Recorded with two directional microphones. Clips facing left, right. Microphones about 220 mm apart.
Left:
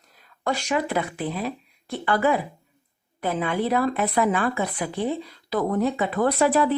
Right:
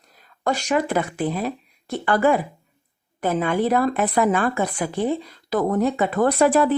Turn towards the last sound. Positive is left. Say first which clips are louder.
# right 3 dB
turn(degrees=-50)  # may be behind; listen again after turning